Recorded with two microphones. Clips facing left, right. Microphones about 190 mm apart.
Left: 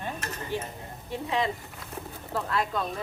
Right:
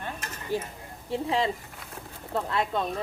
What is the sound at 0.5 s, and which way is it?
Speech, 40° right (ahead or behind).